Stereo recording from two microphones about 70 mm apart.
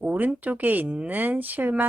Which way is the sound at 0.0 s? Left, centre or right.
Right.